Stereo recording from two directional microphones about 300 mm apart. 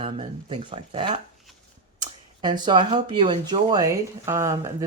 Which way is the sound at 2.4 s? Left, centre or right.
Centre.